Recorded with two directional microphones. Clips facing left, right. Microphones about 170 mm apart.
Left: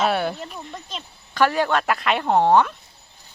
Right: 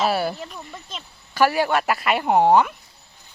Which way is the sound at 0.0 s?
5° right (ahead or behind).